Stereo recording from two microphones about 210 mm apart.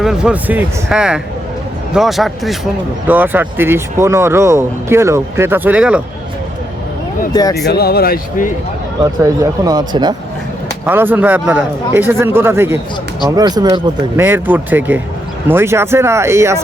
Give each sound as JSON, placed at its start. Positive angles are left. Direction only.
{"t": 0.0, "sound": "speech", "side_deg": -5}
{"t": 7.7, "sound": "speech", "side_deg": 50}
{"t": 9.2, "sound": "speech", "side_deg": -15}
{"t": 10.8, "sound": "speech", "side_deg": -10}